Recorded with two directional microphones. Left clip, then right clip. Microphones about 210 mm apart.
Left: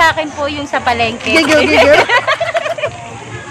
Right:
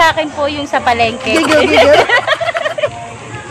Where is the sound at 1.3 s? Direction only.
10° left (ahead or behind).